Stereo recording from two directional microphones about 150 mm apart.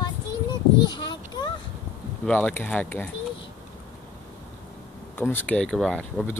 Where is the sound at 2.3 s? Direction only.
10° left (ahead or behind).